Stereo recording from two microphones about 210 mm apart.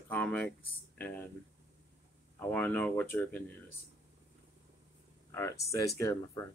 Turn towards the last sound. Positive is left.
turn(degrees=15)  # may be behind; listen again after turning